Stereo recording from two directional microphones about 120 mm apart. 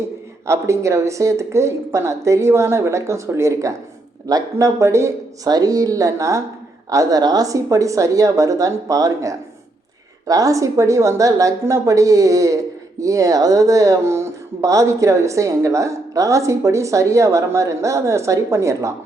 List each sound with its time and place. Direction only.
0.4 s speech: 25° right (ahead or behind)